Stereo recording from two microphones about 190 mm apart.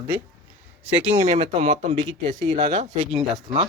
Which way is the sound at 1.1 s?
35° right (ahead or behind).